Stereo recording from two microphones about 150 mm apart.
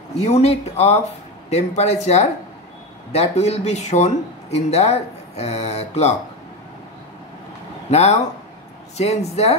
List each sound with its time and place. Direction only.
0.2 s speech: 45° left (ahead or behind)
7.9 s speech: 45° left (ahead or behind)